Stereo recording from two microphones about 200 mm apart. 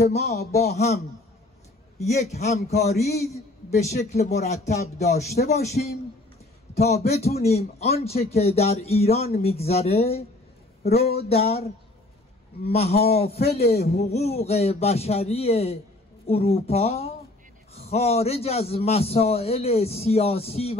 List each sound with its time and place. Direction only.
0.0 s a man's voice: 35° left (ahead or behind)
2.0 s a man's voice: 35° left (ahead or behind)
13.4 s a man's voice: 50° left (ahead or behind)
14.1 s a man's voice: 30° left (ahead or behind)